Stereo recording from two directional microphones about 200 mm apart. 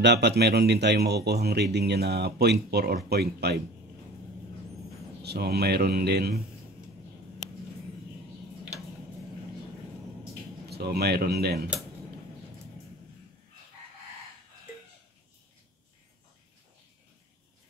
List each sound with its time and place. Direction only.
0.0 s speech: 60° right (ahead or behind)
5.2 s speech: 55° right (ahead or behind)
10.7 s speech: 55° right (ahead or behind)